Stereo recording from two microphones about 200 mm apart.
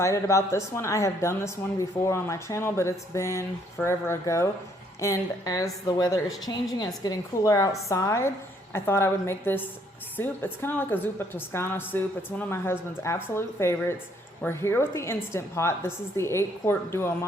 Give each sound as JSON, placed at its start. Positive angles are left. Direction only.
{"t": 0.0, "sound": "a woman's voice", "side_deg": 15}